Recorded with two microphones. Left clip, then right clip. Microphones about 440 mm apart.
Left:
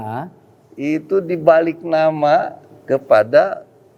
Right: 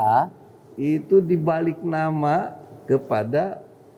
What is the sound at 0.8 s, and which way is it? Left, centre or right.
A man's voice, left.